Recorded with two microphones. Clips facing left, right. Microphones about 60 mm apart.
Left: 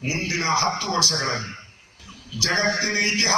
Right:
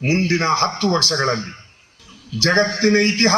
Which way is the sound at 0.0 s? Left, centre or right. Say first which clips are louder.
Right 7 dB; right.